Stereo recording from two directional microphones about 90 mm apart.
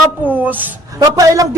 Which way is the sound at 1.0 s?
40° right (ahead or behind).